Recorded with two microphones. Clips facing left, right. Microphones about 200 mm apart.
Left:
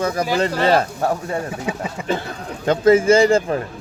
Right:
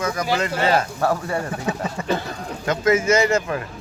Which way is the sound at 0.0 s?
30° left (ahead or behind).